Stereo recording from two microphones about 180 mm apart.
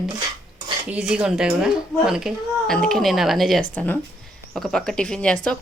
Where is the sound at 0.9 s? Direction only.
5° right (ahead or behind).